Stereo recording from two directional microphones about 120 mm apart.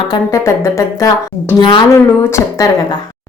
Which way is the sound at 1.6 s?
40° left (ahead or behind).